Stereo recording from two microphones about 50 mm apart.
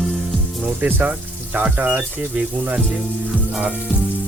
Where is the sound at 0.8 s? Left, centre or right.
Right.